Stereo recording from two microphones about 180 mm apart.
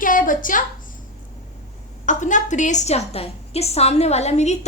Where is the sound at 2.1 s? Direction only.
45° left (ahead or behind).